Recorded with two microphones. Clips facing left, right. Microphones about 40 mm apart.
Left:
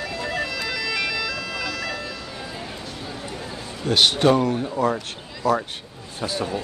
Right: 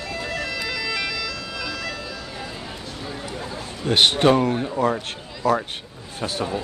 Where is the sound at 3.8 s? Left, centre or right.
Right.